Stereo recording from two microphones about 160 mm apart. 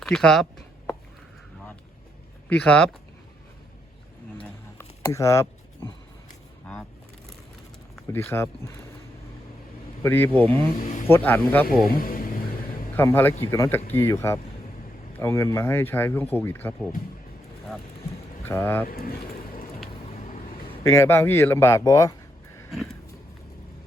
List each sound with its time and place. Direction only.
0.0 s speech: 5° left (ahead or behind)
2.5 s speech: 5° left (ahead or behind)
4.8 s a sound: 20° left (ahead or behind)
8.1 s speech: 15° left (ahead or behind)
10.0 s speech: 15° left (ahead or behind)
10.3 s speech: 35° right (ahead or behind)
10.8 s speech: 55° left (ahead or behind)
11.0 s speech: 15° left (ahead or behind)
11.9 s music: 60° left (ahead or behind)
13.0 s speech: 15° left (ahead or behind)
18.4 s speech: 15° left (ahead or behind)
18.9 s speech: 65° left (ahead or behind)
20.2 s a sound: 60° left (ahead or behind)
20.8 s speech: 15° left (ahead or behind)